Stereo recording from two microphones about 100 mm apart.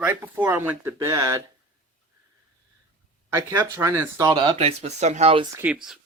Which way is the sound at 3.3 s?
30° right (ahead or behind).